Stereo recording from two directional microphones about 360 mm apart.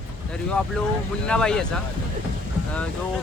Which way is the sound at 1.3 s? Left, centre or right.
Centre.